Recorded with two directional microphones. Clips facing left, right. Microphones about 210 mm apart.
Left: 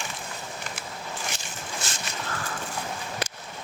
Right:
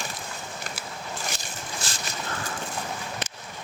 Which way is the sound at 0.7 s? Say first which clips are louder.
Even; 35° right (ahead or behind).